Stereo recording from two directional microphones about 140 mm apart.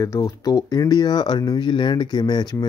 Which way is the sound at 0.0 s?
25° left (ahead or behind).